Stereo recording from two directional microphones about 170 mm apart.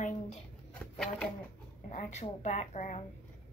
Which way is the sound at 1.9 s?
40° left (ahead or behind).